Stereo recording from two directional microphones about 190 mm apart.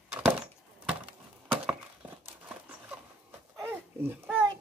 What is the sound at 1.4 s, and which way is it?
Wood, 10° right (ahead or behind).